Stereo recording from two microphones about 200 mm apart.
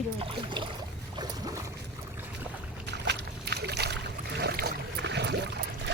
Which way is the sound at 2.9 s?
60° right (ahead or behind).